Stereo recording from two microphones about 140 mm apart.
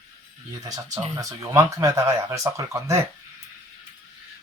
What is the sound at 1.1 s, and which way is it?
Speech, 25° right (ahead or behind).